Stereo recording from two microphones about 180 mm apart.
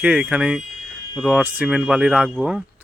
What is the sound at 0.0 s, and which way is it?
Speech, 5° right (ahead or behind).